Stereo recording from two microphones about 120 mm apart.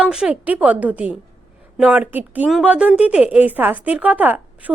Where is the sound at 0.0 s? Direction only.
5° right (ahead or behind).